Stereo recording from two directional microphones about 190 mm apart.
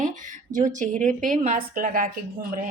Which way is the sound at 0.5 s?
40° right (ahead or behind).